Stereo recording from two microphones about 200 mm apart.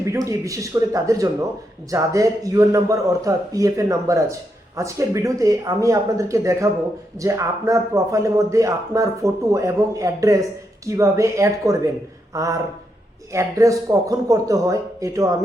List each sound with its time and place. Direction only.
0.0 s a man's voice: 15° right (ahead or behind)